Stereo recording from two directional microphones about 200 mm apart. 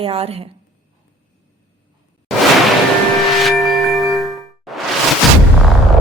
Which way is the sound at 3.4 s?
Centre (ahead or behind).